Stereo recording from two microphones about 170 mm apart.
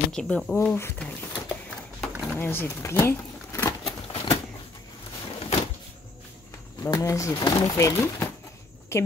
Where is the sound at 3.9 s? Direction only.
30° left (ahead or behind).